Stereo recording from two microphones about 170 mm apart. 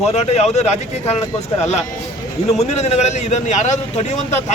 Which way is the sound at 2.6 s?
40° left (ahead or behind).